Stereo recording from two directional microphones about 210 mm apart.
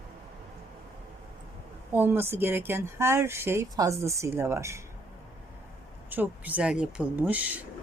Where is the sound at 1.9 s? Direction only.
10° right (ahead or behind).